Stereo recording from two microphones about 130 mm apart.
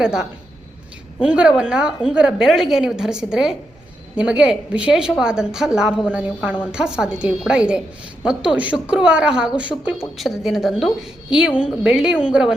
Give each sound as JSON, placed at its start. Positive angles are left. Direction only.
{"t": 0.0, "sound": "a woman's voice", "side_deg": -5}